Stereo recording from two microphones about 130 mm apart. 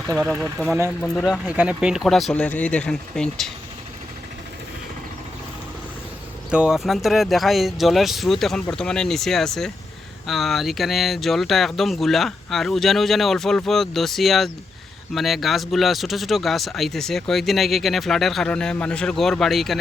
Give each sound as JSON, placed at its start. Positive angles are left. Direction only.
{"t": 0.1, "sound": "speech", "side_deg": -20}
{"t": 1.0, "sound": "speech", "side_deg": 0}
{"t": 6.5, "sound": "speech", "side_deg": -5}